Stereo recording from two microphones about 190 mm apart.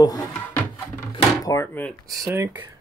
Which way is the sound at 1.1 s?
15° left (ahead or behind).